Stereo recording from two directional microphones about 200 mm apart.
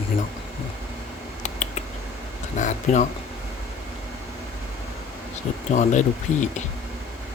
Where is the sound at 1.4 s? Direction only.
35° left (ahead or behind).